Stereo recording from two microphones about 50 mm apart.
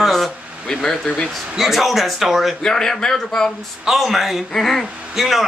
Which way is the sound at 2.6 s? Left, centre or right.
Centre.